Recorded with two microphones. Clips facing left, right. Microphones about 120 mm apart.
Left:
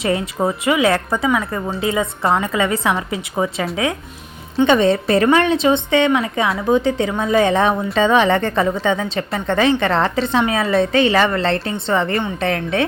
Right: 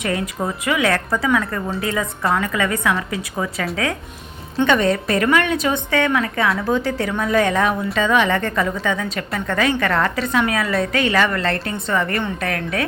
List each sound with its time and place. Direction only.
0.0 s a woman's voice: 25° left (ahead or behind)